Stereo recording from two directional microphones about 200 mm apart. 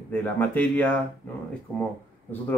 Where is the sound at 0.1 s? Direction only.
10° left (ahead or behind).